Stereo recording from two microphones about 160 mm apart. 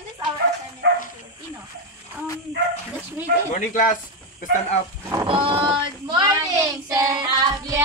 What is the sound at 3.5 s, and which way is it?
Speech, 55° left (ahead or behind).